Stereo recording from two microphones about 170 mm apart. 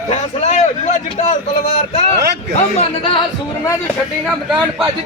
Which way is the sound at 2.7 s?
30° left (ahead or behind).